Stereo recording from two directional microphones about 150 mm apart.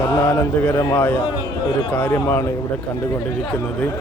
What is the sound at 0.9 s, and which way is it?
A man's voice, 15° left (ahead or behind).